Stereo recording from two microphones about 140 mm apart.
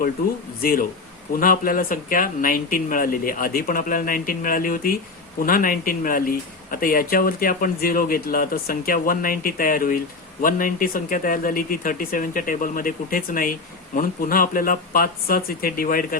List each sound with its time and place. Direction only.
0.6 s speech: 90° left